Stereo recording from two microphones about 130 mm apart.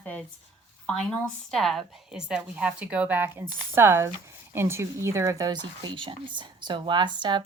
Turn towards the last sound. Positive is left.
turn(degrees=-35)  # may be behind; listen again after turning